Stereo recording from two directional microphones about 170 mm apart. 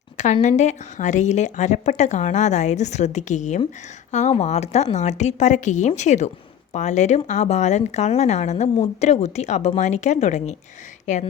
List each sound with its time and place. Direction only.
0.4 s a woman's voice: 45° left (ahead or behind)